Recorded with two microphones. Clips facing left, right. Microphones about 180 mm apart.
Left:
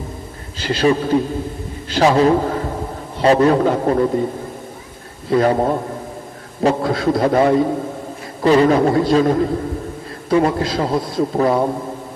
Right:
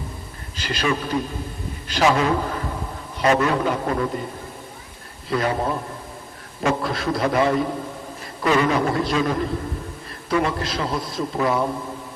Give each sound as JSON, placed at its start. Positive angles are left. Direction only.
{"t": 0.6, "sound": "a man's voice", "side_deg": 30}
{"t": 5.4, "sound": "a man's voice", "side_deg": 40}